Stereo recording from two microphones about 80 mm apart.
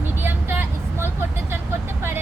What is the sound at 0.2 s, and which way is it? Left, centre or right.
Vehicle, right.